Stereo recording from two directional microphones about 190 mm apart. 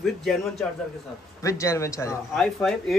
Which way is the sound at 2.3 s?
Centre (ahead or behind).